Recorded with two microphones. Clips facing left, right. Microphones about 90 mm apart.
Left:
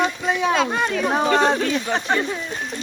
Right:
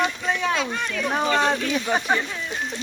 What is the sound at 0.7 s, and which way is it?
Speech, 40° left (ahead or behind).